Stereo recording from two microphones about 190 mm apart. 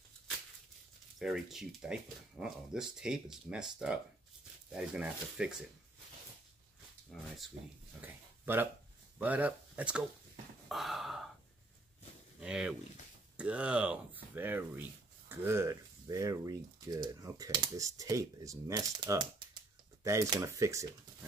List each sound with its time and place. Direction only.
1.2 s speech: centre (ahead or behind)
7.1 s speech: centre (ahead or behind)
8.0 s speech: 10° right (ahead or behind)
10.7 s a sound: centre (ahead or behind)
12.4 s speech: 5° right (ahead or behind)